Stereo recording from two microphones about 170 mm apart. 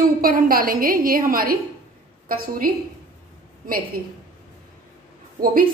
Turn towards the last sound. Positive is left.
turn(degrees=-55)  # may be behind; listen again after turning